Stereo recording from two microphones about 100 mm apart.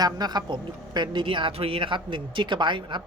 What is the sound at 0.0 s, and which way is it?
A woman's voice, 45° right (ahead or behind).